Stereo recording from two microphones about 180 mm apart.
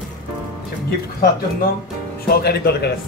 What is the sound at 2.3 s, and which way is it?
Speech, 60° left (ahead or behind).